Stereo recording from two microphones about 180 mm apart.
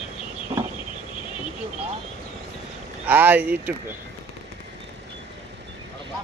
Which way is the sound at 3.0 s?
10° right (ahead or behind).